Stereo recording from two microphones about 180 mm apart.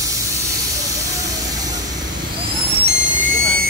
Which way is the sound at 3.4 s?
55° right (ahead or behind).